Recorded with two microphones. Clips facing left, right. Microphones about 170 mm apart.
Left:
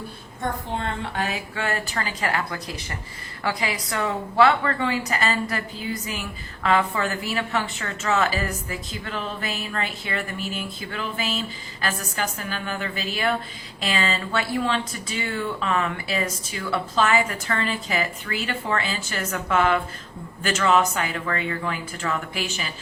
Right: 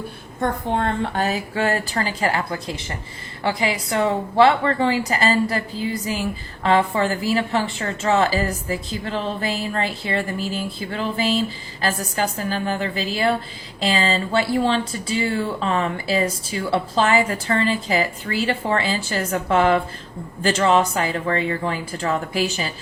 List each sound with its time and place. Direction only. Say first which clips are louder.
0.3 s a woman's voice: right 6 dB; 60° right (ahead or behind)
1.1 s a woman's voice: right 5 dB; 40° right (ahead or behind)